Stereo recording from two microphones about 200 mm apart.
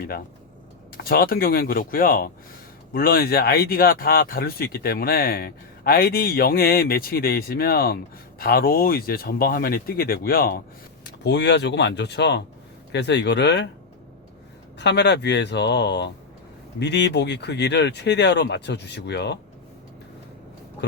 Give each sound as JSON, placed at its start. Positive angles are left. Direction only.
{"t": 1.0, "sound": "speech", "side_deg": 50}
{"t": 11.2, "sound": "speech", "side_deg": 60}
{"t": 14.8, "sound": "speech", "side_deg": 60}